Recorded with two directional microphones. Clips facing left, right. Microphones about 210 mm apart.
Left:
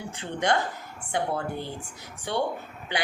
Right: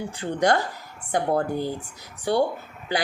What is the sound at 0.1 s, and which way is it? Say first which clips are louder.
A woman's voice: right 4 dB; 35° right (ahead or behind).